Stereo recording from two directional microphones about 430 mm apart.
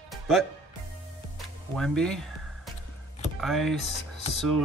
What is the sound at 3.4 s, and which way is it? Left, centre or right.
Speech, centre.